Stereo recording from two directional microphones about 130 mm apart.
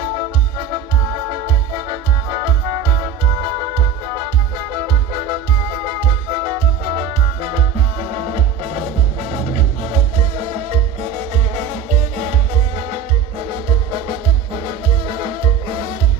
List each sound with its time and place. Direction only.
1.3 s music: 45° right (ahead or behind)
5.3 s music: 45° right (ahead or behind)
9.8 s music: 50° right (ahead or behind)
12.2 s music: 60° right (ahead or behind)
13.5 s music: 40° right (ahead or behind)